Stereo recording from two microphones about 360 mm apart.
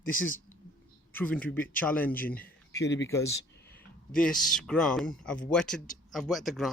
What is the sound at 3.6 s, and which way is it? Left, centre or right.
Speech, centre.